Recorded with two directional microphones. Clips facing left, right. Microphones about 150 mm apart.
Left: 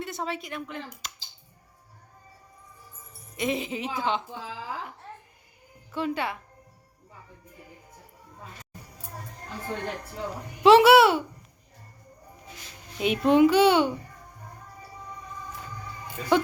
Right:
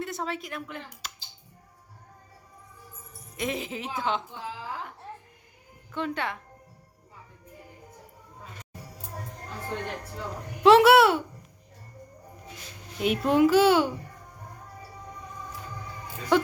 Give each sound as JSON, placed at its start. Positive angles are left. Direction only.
{"t": 0.0, "sound": "speech", "side_deg": 0}
{"t": 3.3, "sound": "a child's voice", "side_deg": 0}
{"t": 5.9, "sound": "a child's voice", "side_deg": 5}
{"t": 10.6, "sound": "a child's voice", "side_deg": 0}
{"t": 13.0, "sound": "a child's voice", "side_deg": 0}
{"t": 16.3, "sound": "a child's voice", "side_deg": 0}